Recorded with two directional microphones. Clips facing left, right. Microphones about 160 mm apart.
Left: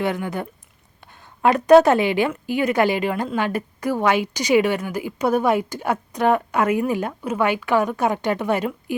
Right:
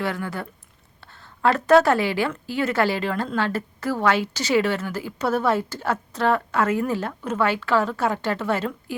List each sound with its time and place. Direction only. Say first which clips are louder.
0.0 s a woman's voice: left 4 dB; 20° left (ahead or behind)